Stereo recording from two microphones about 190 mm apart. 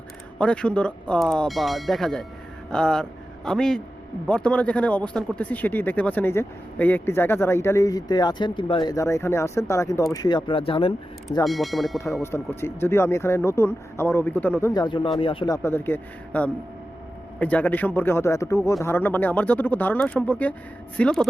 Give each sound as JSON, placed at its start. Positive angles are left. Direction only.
{"t": 0.3, "sound": "speech", "side_deg": 5}
{"t": 11.4, "sound": "speech", "side_deg": 0}
{"t": 12.2, "sound": "speech", "side_deg": 10}
{"t": 14.7, "sound": "speech", "side_deg": 25}
{"t": 15.5, "sound": "speech", "side_deg": 10}